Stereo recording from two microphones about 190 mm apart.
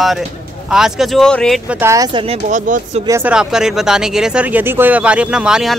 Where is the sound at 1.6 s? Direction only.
10° right (ahead or behind).